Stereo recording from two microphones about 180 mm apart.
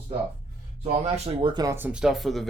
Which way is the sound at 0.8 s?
35° right (ahead or behind).